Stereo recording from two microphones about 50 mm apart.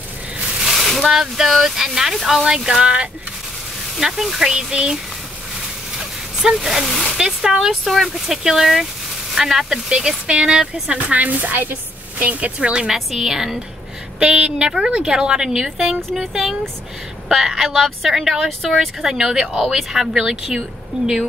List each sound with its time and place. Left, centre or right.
0.6 s speech: centre
5.9 s a sound: centre
7.2 s speech: centre
11.1 s a woman's voice: right
12.8 s speech: centre
14.2 s speech: centre
16.0 s speech: centre
17.3 s speech: centre
19.0 s speech: centre